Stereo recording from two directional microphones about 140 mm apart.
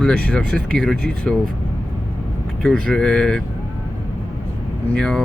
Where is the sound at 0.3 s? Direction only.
5° left (ahead or behind).